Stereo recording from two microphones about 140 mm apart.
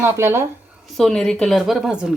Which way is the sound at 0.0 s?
15° right (ahead or behind).